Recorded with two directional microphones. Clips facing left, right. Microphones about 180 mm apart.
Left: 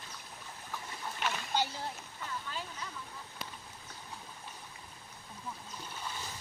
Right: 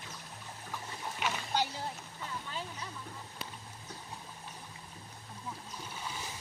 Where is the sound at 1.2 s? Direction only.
5° right (ahead or behind).